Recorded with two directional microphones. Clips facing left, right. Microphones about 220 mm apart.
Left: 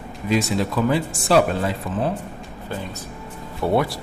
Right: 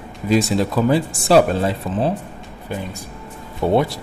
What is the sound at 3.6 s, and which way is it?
Speech, 20° right (ahead or behind).